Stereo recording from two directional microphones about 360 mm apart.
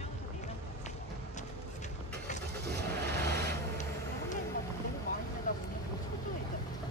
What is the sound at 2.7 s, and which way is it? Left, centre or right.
Vehicle, right.